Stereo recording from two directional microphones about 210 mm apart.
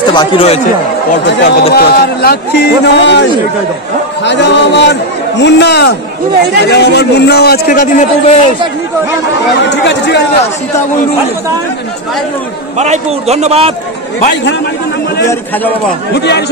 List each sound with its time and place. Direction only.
0.1 s speech: 25° left (ahead or behind)
1.2 s music: 55° left (ahead or behind)
1.7 s a man's voice: 45° left (ahead or behind)
4.2 s music: 55° left (ahead or behind)
5.4 s a man's voice: 55° left (ahead or behind); by 8.4 s 40° left (ahead or behind)
9.7 s music: 55° left (ahead or behind)
12.7 s a man's voice: 30° right (ahead or behind)
16.2 s a man's voice: 55° left (ahead or behind)